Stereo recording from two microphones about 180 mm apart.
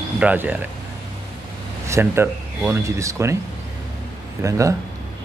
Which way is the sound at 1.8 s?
15° right (ahead or behind).